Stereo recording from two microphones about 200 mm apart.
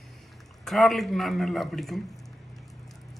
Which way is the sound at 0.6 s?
Centre (ahead or behind).